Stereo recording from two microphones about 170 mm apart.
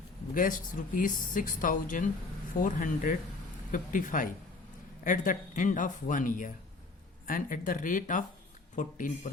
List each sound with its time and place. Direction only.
0.3 s speech: 50° left (ahead or behind)